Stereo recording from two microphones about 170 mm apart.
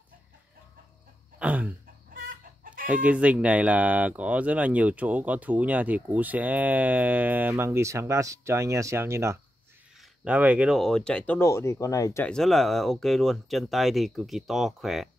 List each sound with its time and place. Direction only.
1.4 s a sound: 10° right (ahead or behind)
2.1 s chicken: 55° right (ahead or behind)
2.9 s speech: 10° right (ahead or behind)
9.9 s speech: 5° right (ahead or behind); by 12.3 s 15° left (ahead or behind)
12.3 s speech: centre (ahead or behind)